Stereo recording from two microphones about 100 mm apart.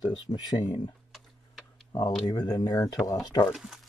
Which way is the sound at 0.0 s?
45° left (ahead or behind).